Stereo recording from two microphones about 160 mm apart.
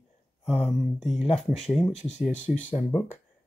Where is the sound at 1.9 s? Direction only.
45° left (ahead or behind).